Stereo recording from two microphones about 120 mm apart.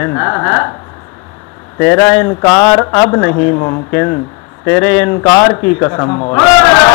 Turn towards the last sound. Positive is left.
turn(degrees=25)  # may be behind; listen again after turning